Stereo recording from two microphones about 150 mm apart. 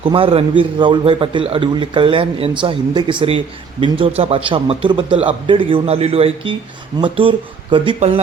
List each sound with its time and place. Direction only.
0.0 s speech: 35° right (ahead or behind)
7.9 s speech: 45° right (ahead or behind)